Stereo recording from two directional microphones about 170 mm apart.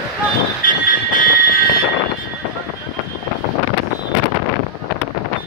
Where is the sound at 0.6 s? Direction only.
55° left (ahead or behind).